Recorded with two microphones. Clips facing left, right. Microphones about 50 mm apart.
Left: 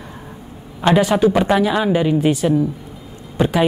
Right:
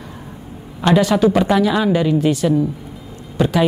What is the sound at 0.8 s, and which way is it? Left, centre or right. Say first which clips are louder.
A woman's voice: even; centre.